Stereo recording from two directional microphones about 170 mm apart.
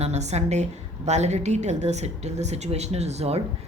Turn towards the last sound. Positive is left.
turn(degrees=-40)  # may be behind; listen again after turning